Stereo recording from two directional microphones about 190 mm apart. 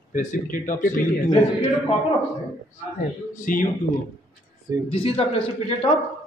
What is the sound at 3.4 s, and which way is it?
Speech, 45° left (ahead or behind).